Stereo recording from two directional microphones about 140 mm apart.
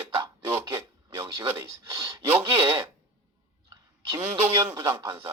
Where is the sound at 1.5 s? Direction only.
15° right (ahead or behind).